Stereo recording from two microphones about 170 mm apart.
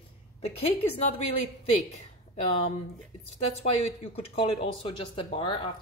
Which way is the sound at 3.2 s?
40° left (ahead or behind).